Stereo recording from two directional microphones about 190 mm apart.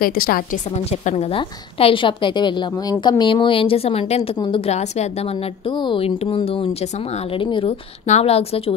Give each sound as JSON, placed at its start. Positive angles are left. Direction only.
{"t": 0.0, "sound": "a woman's voice", "side_deg": 50}
{"t": 1.0, "sound": "a woman's voice", "side_deg": 30}
{"t": 5.7, "sound": "a woman's voice", "side_deg": 25}